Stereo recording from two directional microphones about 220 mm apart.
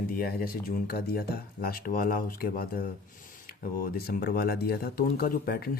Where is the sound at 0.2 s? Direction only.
40° left (ahead or behind).